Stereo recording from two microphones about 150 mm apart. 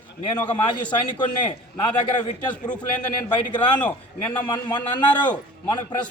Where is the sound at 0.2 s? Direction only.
30° left (ahead or behind).